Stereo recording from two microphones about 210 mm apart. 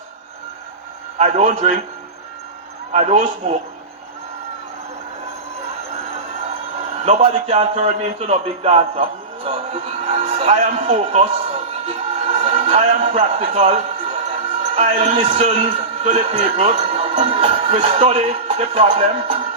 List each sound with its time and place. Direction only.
1.2 s a man's voice: 30° right (ahead or behind)
2.9 s a man's voice: 30° right (ahead or behind)
7.0 s a man's voice: 30° right (ahead or behind)